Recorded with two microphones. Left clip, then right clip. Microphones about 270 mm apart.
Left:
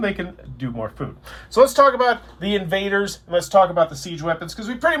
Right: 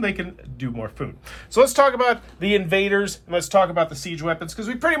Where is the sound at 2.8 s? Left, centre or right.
Right.